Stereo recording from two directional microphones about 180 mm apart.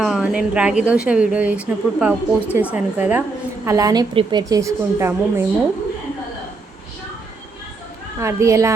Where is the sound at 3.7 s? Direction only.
20° right (ahead or behind).